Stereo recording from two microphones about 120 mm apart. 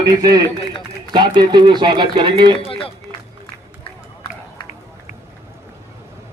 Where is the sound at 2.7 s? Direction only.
50° left (ahead or behind).